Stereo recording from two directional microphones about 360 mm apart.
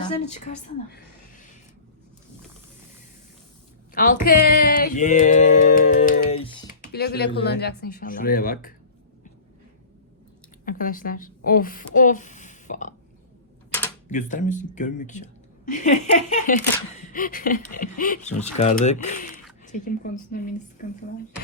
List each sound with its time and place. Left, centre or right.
0.0 s speech: centre
3.9 s speech: left
4.3 s music: left
6.9 s speech: left
10.7 s speech: left
14.1 s speech: left